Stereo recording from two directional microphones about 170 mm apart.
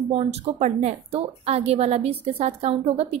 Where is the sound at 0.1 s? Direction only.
35° right (ahead or behind).